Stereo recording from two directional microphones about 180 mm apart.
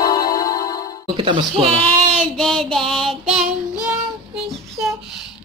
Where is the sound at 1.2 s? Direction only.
30° right (ahead or behind).